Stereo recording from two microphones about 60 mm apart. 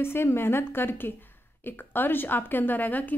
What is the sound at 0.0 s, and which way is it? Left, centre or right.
Speech, left.